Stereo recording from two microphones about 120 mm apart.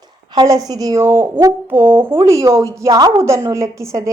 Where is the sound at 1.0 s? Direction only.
20° right (ahead or behind).